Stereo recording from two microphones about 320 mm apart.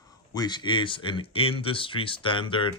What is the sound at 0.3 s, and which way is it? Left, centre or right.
Speech, centre.